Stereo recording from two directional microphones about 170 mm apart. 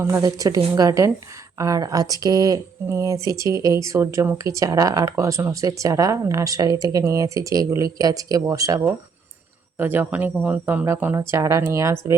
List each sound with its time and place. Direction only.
0.0 s speech: 15° right (ahead or behind)